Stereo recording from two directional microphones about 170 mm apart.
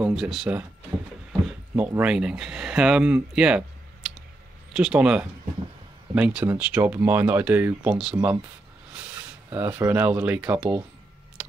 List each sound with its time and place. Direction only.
0.1 s speech: centre (ahead or behind)
1.8 s speech: 10° right (ahead or behind)
9.5 s speech: 10° right (ahead or behind)